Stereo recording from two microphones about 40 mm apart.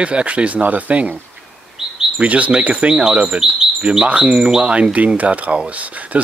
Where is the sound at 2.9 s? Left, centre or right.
Right.